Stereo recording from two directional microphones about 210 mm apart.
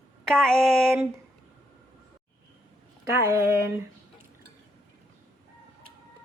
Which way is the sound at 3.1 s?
15° right (ahead or behind).